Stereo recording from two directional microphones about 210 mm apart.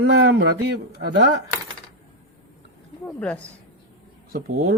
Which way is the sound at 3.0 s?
5° left (ahead or behind).